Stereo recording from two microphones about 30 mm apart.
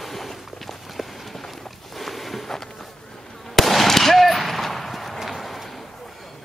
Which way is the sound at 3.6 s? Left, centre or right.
Centre.